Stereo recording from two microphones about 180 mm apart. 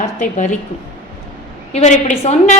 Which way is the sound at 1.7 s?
40° left (ahead or behind).